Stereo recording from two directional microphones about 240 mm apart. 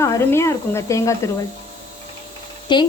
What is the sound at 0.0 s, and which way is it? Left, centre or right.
Speech, centre.